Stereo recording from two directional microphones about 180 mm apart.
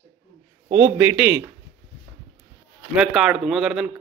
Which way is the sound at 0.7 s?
10° right (ahead or behind).